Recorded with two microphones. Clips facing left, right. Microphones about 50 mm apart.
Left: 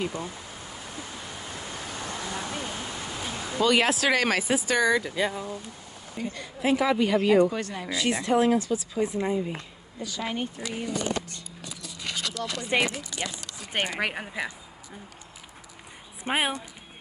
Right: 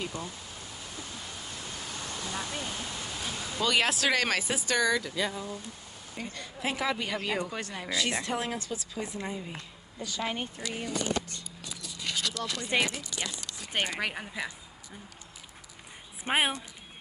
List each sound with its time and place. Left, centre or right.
0.0 s speech: centre
1.4 s pink noise: left
6.1 s speech: centre
10.6 s speech: left
16.3 s speech: centre